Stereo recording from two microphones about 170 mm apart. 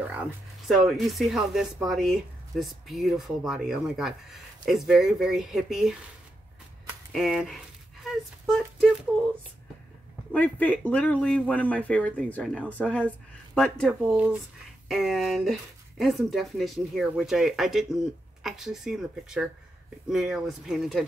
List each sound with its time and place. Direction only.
0.7 s speech: centre (ahead or behind)
7.1 s a sound: centre (ahead or behind)
10.3 s speech: 10° left (ahead or behind)
14.0 s speech: 5° right (ahead or behind)